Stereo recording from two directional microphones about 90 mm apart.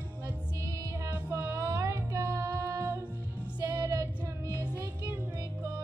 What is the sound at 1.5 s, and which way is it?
Music, 35° right (ahead or behind).